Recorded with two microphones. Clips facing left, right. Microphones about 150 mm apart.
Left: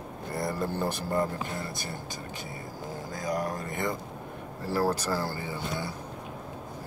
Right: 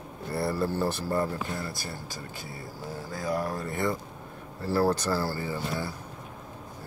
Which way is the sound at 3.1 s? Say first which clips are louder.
Right 1 dB; 15° left (ahead or behind).